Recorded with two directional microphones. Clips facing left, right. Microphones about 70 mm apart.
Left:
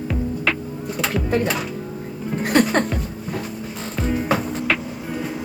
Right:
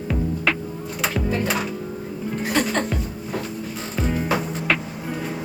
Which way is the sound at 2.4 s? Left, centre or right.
Left.